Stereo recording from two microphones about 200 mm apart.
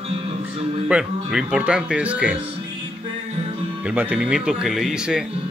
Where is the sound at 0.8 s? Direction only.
5° right (ahead or behind).